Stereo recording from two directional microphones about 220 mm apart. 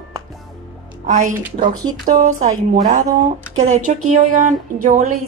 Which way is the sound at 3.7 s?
35° right (ahead or behind).